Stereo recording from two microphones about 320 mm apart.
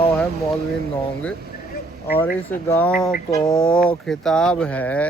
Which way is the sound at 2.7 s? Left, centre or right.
Centre.